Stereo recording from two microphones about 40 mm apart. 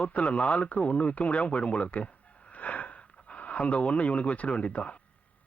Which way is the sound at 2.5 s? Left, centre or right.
Left.